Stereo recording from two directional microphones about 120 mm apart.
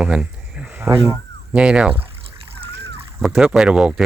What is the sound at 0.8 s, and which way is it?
Speech, 20° right (ahead or behind).